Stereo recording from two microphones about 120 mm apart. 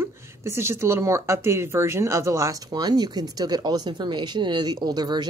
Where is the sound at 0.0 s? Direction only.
20° right (ahead or behind).